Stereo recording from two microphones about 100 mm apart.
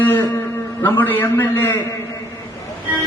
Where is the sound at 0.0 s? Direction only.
20° left (ahead or behind).